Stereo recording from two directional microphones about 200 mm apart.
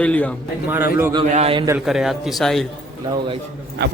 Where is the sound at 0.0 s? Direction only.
5° left (ahead or behind).